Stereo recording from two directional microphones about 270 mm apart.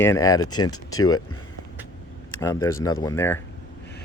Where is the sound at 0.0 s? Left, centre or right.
Centre.